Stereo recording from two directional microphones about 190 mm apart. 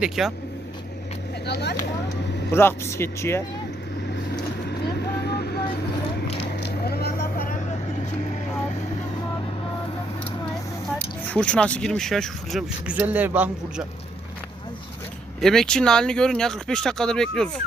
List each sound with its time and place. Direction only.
0.0 s speech: centre (ahead or behind)
1.5 s speech: 60° left (ahead or behind)
2.5 s speech: 10° left (ahead or behind)
5.2 s vehicle: 55° left (ahead or behind)
10.9 s a man's voice: 5° left (ahead or behind); by 13.8 s 10° right (ahead or behind)
15.4 s speech: centre (ahead or behind)